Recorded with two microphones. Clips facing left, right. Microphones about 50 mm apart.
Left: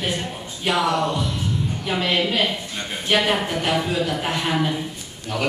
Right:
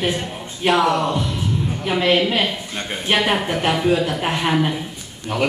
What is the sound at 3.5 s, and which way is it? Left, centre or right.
A man's voice, centre.